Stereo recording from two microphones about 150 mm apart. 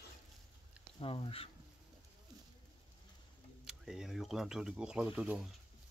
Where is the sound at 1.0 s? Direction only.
40° left (ahead or behind).